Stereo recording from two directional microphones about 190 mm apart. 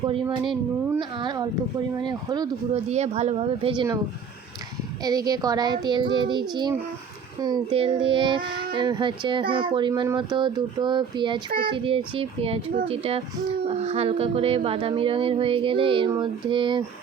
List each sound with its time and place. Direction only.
0.9 s speech: 25° right (ahead or behind)
2.9 s speech: 35° right (ahead or behind)
5.0 s speech: 20° right (ahead or behind)